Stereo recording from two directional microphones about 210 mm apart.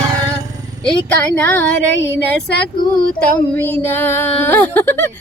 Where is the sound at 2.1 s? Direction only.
50° left (ahead or behind).